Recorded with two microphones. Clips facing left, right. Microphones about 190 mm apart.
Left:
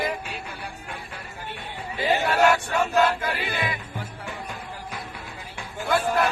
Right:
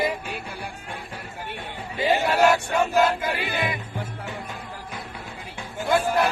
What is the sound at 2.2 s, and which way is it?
Music, 15° right (ahead or behind).